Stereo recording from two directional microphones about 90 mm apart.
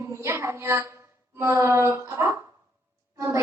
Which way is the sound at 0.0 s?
30° right (ahead or behind).